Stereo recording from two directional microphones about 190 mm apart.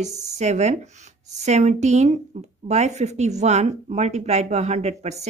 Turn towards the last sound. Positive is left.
turn(degrees=-35)  # may be behind; listen again after turning